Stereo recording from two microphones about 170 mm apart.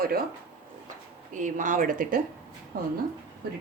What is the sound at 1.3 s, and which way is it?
Speech, 50° right (ahead or behind).